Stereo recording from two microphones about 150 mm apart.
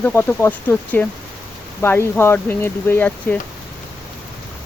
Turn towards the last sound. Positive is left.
turn(degrees=15)  # may be behind; listen again after turning